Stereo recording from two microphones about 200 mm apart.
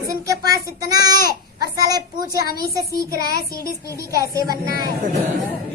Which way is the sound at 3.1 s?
50° left (ahead or behind).